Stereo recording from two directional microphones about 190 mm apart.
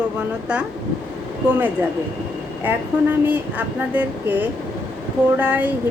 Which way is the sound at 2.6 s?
10° right (ahead or behind).